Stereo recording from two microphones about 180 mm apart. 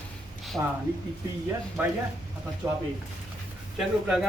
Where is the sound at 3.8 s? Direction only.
Centre (ahead or behind).